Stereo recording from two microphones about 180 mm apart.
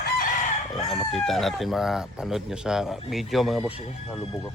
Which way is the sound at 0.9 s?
Centre (ahead or behind).